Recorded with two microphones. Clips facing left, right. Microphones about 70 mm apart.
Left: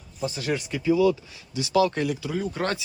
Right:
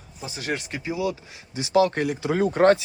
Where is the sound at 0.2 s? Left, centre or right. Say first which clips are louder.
Left 2 dB; centre.